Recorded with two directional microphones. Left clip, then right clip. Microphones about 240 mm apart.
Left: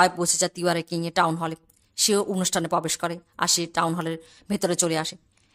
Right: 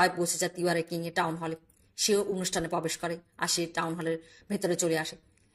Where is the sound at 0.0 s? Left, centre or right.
Left.